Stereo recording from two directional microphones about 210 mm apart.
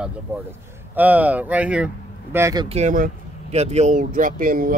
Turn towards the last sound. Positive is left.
turn(degrees=-40)  # may be behind; listen again after turning